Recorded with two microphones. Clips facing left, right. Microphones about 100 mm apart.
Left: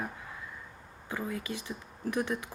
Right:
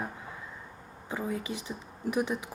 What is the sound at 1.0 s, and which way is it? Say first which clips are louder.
Speech: right 2 dB; 20° right (ahead or behind).